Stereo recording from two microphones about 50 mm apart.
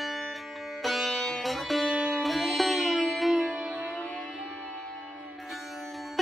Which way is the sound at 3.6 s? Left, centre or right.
Right.